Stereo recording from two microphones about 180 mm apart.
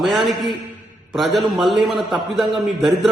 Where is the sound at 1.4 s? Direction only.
25° right (ahead or behind).